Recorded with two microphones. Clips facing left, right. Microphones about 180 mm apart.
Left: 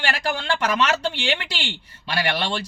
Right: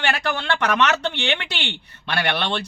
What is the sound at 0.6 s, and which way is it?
Speech, 65° right (ahead or behind).